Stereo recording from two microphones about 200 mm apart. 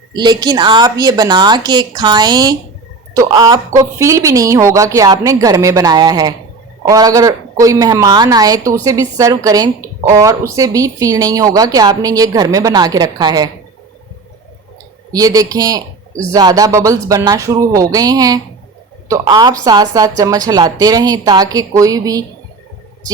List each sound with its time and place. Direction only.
0.2 s a woman's voice: 20° right (ahead or behind)
15.1 s a woman's voice: 20° right (ahead or behind)